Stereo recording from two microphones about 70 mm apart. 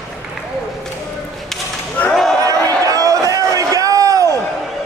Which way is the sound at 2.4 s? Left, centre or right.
Right.